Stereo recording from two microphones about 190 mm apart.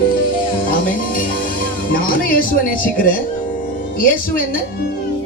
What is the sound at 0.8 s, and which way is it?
Music, 45° left (ahead or behind).